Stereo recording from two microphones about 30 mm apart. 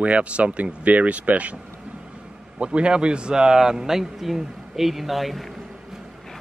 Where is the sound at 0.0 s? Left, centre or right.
Right.